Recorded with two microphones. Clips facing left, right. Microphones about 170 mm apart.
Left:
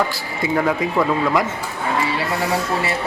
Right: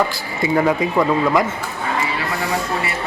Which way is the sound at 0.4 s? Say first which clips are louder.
Right 2 dB; 5° right (ahead or behind).